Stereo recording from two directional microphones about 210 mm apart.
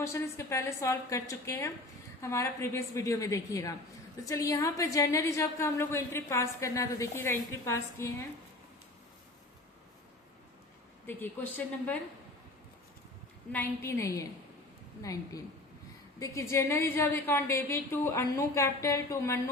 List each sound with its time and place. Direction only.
0.0 s a woman's voice: 15° left (ahead or behind)
11.0 s a woman's voice: 10° left (ahead or behind)
13.5 s a woman's voice: 10° left (ahead or behind)